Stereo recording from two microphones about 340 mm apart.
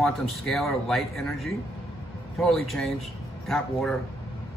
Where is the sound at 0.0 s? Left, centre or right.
Centre.